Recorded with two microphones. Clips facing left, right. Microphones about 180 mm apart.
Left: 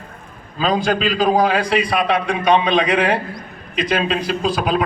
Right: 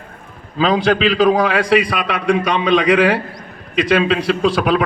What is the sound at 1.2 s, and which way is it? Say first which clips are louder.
A man's voice: even; 80° right.